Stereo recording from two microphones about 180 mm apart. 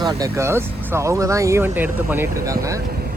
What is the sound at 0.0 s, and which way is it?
Speech, 20° right (ahead or behind).